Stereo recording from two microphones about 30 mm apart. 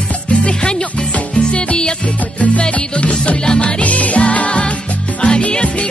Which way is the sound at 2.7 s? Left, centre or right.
Left.